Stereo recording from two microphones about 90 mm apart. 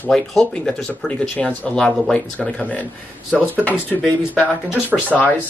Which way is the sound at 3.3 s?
Centre (ahead or behind).